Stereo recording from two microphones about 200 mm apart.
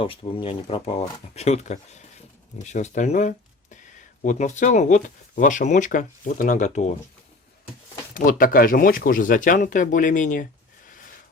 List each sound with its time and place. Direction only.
0.0 s speech: 25° left (ahead or behind)
8.1 s speech: 45° left (ahead or behind)